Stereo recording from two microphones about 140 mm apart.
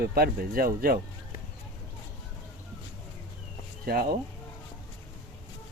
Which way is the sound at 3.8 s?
90° right.